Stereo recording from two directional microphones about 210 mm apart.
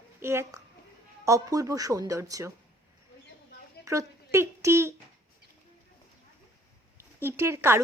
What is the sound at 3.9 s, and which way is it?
Speech, 15° right (ahead or behind).